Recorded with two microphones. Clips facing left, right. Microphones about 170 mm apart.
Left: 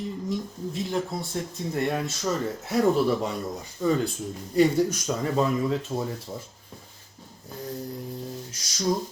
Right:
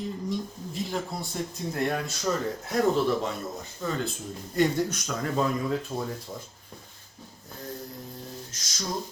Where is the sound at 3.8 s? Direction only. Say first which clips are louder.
Left 7 dB; 15° left (ahead or behind).